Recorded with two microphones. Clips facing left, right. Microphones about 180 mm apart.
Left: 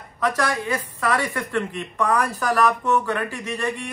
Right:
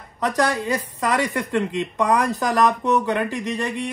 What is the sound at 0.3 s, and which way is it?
Speech, 15° right (ahead or behind).